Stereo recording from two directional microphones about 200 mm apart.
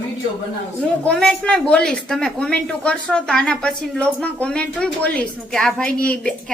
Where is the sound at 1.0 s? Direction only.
5° left (ahead or behind).